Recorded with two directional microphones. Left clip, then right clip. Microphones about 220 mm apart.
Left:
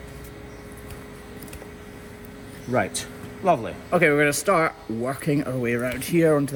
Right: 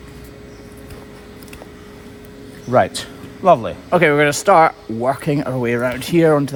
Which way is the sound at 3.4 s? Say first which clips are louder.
Right 9 dB; 40° right (ahead or behind).